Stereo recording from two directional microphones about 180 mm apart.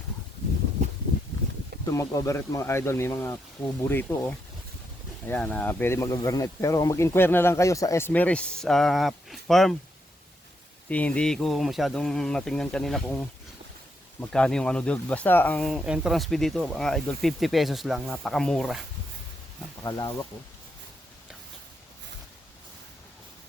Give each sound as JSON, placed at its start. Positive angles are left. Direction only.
{"t": 1.9, "sound": "speech", "side_deg": 15}
{"t": 10.8, "sound": "speech", "side_deg": 5}
{"t": 19.8, "sound": "speech", "side_deg": 20}